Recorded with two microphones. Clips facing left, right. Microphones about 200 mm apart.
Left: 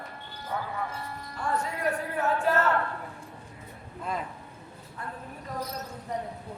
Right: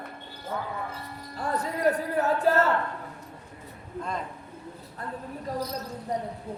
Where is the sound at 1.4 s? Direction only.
35° right (ahead or behind).